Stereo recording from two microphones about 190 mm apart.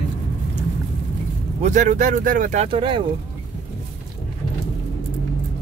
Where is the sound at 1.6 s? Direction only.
40° right (ahead or behind).